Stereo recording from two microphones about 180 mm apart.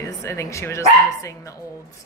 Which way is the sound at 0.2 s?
15° left (ahead or behind).